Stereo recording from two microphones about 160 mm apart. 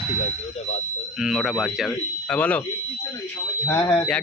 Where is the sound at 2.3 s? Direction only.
10° left (ahead or behind).